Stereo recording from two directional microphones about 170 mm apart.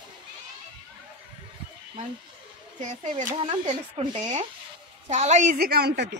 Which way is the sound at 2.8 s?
45° right (ahead or behind).